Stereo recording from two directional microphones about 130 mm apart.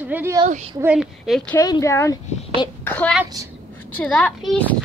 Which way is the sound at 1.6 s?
25° left (ahead or behind).